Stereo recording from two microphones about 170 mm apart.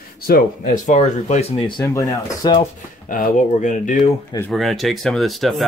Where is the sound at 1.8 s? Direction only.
20° left (ahead or behind).